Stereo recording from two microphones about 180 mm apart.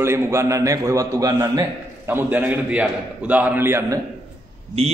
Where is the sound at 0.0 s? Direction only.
15° right (ahead or behind).